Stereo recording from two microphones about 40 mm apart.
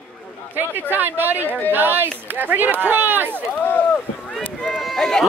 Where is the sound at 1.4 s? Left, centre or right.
Left.